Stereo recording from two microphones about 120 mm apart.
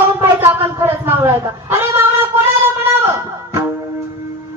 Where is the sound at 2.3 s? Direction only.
55° right (ahead or behind).